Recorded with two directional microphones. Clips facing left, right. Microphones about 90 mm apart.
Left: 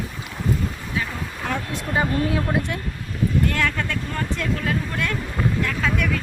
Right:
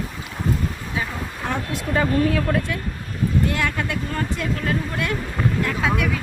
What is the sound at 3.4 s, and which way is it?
Speech, 10° right (ahead or behind).